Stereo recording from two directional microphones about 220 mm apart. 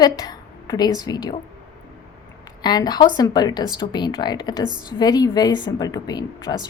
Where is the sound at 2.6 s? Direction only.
20° left (ahead or behind).